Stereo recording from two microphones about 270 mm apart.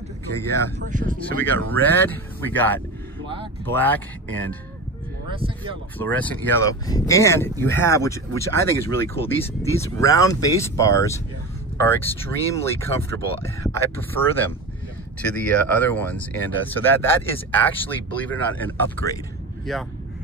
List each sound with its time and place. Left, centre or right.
0.4 s speech: centre
0.7 s speech: right
1.7 s speech: centre
5.9 s speech: centre